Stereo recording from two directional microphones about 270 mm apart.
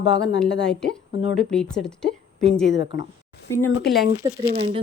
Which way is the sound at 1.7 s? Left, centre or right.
Centre.